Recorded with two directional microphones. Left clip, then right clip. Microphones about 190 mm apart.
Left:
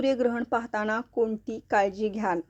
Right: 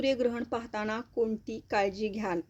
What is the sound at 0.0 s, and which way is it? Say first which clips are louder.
Speech: left 3 dB; centre (ahead or behind).